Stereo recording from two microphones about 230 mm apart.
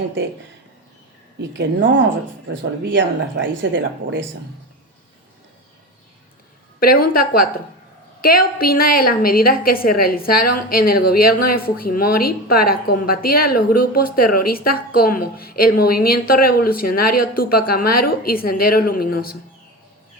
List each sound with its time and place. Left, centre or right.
1.4 s speech: right
6.7 s a woman's voice: left